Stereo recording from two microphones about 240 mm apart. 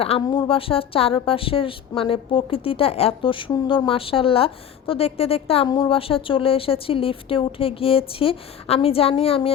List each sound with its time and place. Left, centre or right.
0.0 s a woman's voice: left